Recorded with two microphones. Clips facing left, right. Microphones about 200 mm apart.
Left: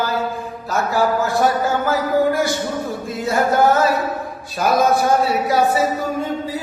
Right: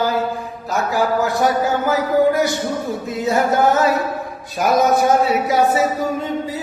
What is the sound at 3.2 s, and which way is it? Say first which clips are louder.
Speech: even; 20° right (ahead or behind).